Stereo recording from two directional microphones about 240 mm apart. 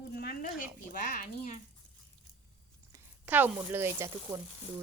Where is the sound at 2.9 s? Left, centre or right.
Centre.